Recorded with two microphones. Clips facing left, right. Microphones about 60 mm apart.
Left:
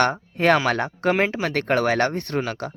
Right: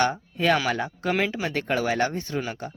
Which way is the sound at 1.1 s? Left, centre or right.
Left.